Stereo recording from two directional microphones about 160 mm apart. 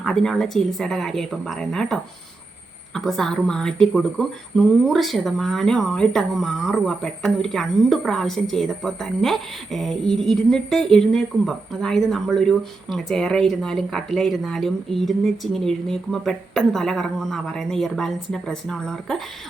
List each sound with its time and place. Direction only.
0.0 s speech: 5° left (ahead or behind)